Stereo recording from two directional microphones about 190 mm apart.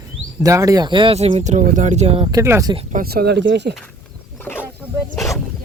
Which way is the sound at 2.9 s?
55° right (ahead or behind).